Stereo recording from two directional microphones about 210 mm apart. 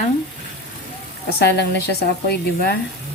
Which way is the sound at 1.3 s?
50° left (ahead or behind).